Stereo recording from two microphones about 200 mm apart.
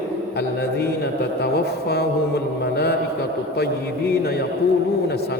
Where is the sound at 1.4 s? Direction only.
55° left (ahead or behind).